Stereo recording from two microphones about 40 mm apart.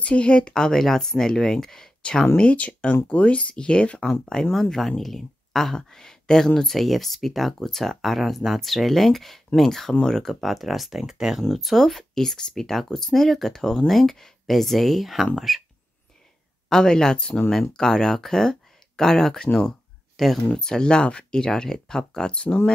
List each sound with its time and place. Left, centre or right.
0.0 s speech: left; by 1.9 s centre
2.3 s speech: left
4.0 s speech: centre
6.8 s speech: centre
10.4 s speech: centre
11.5 s speech: centre
16.6 s speech: centre
20.5 s speech: centre
22.3 s speech: left